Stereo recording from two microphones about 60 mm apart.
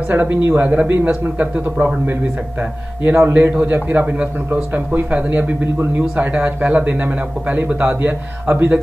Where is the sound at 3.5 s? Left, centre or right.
Right.